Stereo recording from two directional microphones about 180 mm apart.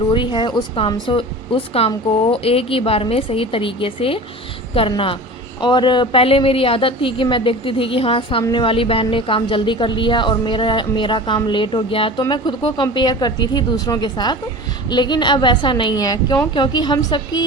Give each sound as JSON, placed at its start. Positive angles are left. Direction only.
{"t": 0.1, "sound": "a woman's voice", "side_deg": 25}